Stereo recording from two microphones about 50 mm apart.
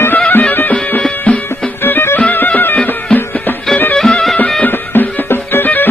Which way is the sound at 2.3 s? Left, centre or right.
Left.